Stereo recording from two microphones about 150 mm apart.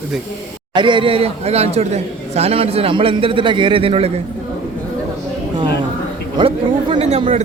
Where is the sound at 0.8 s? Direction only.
30° right (ahead or behind).